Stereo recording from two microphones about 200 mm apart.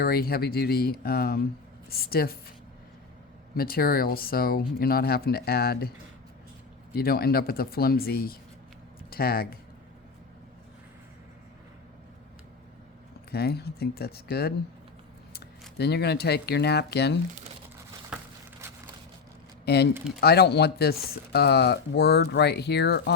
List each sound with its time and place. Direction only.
0.0 s speech: 50° left (ahead or behind)
3.6 s speech: 50° left (ahead or behind)
6.9 s speech: 50° left (ahead or behind)
13.3 s speech: 55° left (ahead or behind)
15.8 s speech: 55° left (ahead or behind)
18.1 s a sound: 5° right (ahead or behind)
19.6 s speech: 55° left (ahead or behind)